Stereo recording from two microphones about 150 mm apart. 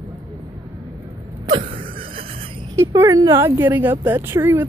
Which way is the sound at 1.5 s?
40° right (ahead or behind).